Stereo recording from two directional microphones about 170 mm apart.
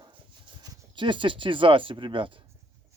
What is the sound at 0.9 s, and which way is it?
Speech, 30° right (ahead or behind).